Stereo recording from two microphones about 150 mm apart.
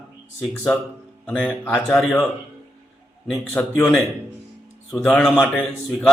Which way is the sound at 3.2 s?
5° left (ahead or behind).